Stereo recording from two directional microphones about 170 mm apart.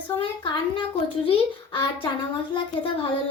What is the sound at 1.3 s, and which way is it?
A woman's voice, 30° left (ahead or behind).